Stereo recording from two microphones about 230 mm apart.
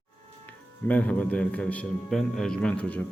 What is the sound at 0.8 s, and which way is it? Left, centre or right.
A man's voice, centre.